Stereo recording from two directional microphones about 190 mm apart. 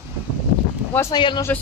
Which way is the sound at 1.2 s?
25° left (ahead or behind).